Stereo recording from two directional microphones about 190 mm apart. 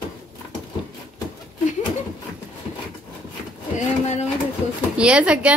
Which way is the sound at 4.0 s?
35° left (ahead or behind).